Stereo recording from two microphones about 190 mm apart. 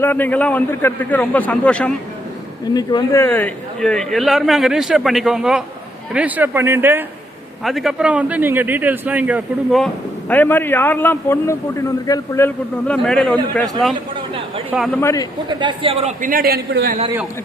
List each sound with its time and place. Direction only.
0.0 s a man's voice: 10° left (ahead or behind)
2.7 s a man's voice: 20° left (ahead or behind); by 7.0 s 10° right (ahead or behind)
7.6 s a man's voice: centre (ahead or behind)
15.0 s a man's voice: 20° left (ahead or behind)
15.4 s a man's voice: 25° right (ahead or behind); by 17.0 s 55° right (ahead or behind)